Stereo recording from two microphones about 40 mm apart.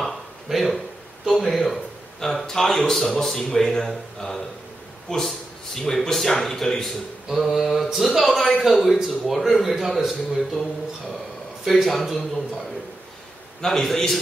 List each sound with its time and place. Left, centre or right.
0.0 s a sound: centre
1.2 s a man's voice: centre
11.6 s a man's voice: centre
13.7 s speech: centre